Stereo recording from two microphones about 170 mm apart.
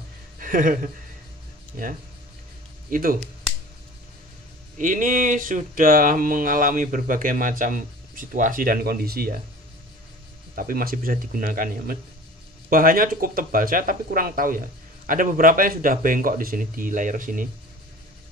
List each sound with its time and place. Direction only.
0.4 s speech: 55° right (ahead or behind)
2.9 s speech: 55° right (ahead or behind)
4.7 s speech: 50° right (ahead or behind)
10.5 s speech: 55° right (ahead or behind)